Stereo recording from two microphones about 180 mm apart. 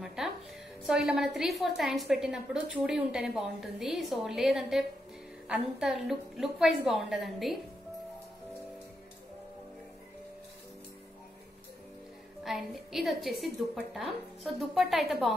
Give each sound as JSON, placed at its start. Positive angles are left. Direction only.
{"t": 0.0, "sound": "music", "side_deg": -5}
{"t": 0.8, "sound": "a woman's voice", "side_deg": -5}
{"t": 12.4, "sound": "a woman's voice", "side_deg": 0}